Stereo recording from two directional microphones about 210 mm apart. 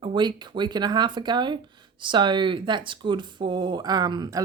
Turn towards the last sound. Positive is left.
turn(degrees=-20)  # may be behind; listen again after turning